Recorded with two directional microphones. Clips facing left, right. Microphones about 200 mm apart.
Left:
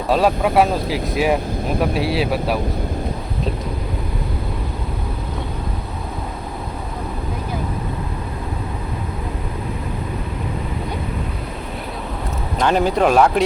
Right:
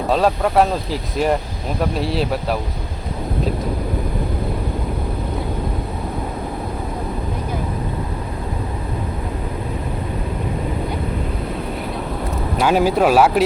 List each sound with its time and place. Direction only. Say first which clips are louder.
0.1 s speech: left 1 dB; 5° left (ahead or behind)
12.5 s speech: right 1 dB; 5° right (ahead or behind)